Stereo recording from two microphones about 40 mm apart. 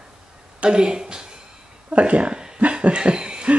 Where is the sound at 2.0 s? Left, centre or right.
Right.